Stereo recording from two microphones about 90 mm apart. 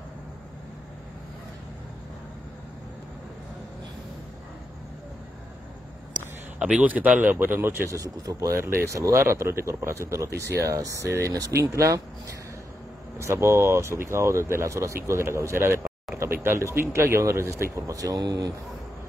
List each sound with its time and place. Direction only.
6.6 s speech: 15° right (ahead or behind)
8.0 s speech: 35° right (ahead or behind)